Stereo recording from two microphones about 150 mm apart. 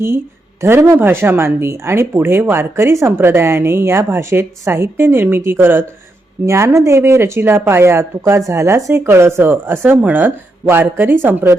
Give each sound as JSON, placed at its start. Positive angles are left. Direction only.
{"t": 0.6, "sound": "speech", "side_deg": -15}